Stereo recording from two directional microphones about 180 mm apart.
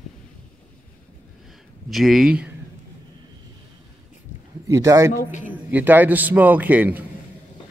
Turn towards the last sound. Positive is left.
turn(degrees=-10)  # may be behind; listen again after turning